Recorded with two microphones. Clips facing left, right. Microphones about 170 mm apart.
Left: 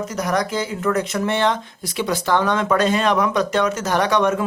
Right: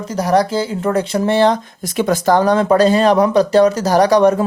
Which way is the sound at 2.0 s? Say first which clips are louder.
Right 6 dB; 45° right (ahead or behind).